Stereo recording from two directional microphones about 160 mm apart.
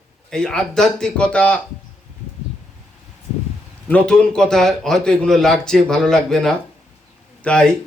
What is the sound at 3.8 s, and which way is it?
A man's voice, 5° left (ahead or behind).